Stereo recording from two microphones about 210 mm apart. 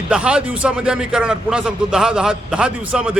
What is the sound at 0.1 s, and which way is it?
A man's voice, 5° right (ahead or behind).